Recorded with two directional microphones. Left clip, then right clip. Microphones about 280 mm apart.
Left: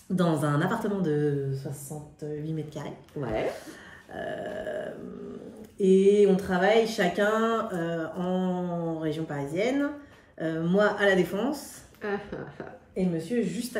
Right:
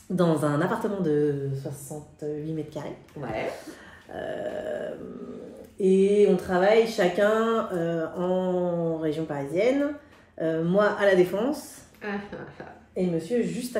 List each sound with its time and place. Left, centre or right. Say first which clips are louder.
0.1 s speech: right 3 dB; centre
2.4 s speech: right 3 dB; centre
3.5 s burping: right 1 dB; centre
5.8 s speech: even; centre
12.0 s speech: left 1 dB; left
12.9 s speech: right 3 dB; centre